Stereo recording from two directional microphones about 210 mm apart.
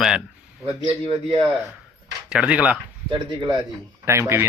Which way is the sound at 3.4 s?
20° right (ahead or behind).